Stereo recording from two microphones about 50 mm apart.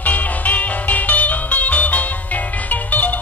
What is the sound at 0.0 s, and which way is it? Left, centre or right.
Music, left.